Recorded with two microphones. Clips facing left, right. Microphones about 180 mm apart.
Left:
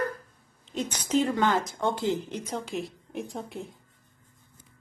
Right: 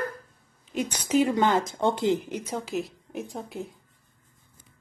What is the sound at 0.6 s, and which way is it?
Speech, 10° right (ahead or behind).